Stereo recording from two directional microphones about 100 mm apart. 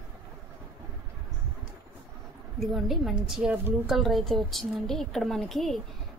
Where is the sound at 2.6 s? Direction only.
Centre (ahead or behind).